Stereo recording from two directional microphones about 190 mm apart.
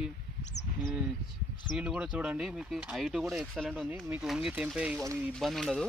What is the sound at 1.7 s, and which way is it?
Speech, 5° right (ahead or behind).